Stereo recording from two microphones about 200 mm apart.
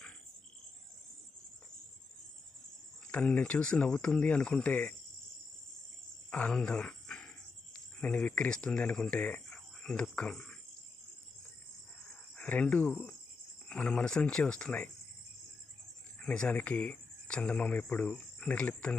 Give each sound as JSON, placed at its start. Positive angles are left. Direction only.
{"t": 3.1, "sound": "speech", "side_deg": 5}
{"t": 6.3, "sound": "speech", "side_deg": 5}
{"t": 12.4, "sound": "speech", "side_deg": 5}
{"t": 16.2, "sound": "speech", "side_deg": 5}